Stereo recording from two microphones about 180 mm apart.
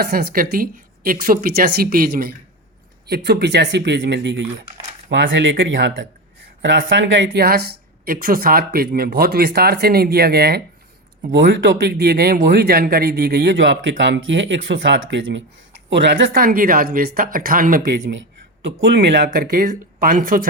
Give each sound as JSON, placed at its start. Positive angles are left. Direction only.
{"t": 0.0, "sound": "a woman's voice", "side_deg": -60}
{"t": 3.1, "sound": "speech", "side_deg": -65}
{"t": 5.0, "sound": "speech", "side_deg": -90}
{"t": 11.3, "sound": "speech", "side_deg": -75}
{"t": 16.3, "sound": "a woman's voice", "side_deg": -50}
{"t": 18.0, "sound": "speech", "side_deg": -90}
{"t": 18.8, "sound": "speech", "side_deg": -70}
{"t": 19.3, "sound": "a woman's voice", "side_deg": -50}